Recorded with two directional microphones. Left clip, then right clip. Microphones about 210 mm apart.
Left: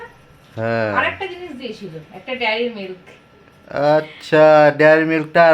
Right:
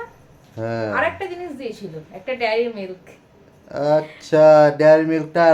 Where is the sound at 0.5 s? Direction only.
25° left (ahead or behind).